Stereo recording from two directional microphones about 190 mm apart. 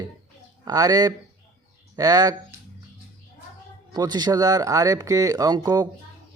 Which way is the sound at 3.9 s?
20° right (ahead or behind).